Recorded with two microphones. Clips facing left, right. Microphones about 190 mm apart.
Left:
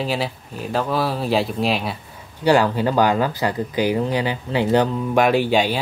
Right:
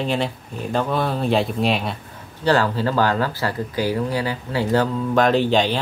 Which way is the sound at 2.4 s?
15° left (ahead or behind).